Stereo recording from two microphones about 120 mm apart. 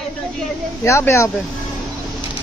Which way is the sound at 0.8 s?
25° left (ahead or behind).